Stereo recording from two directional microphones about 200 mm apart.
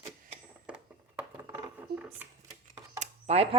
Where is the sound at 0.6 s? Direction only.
5° right (ahead or behind).